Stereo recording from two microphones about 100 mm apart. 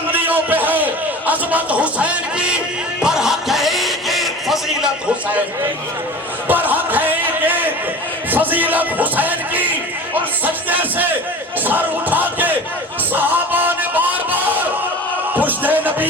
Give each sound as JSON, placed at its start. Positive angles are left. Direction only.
{"t": 0.1, "sound": "a sound", "side_deg": -20}
{"t": 1.3, "sound": "music", "side_deg": -15}
{"t": 6.5, "sound": "a sound", "side_deg": -20}
{"t": 8.3, "sound": "speech", "side_deg": -20}
{"t": 10.4, "sound": "music", "side_deg": -15}
{"t": 11.6, "sound": "crowd", "side_deg": -15}
{"t": 13.1, "sound": "music", "side_deg": -20}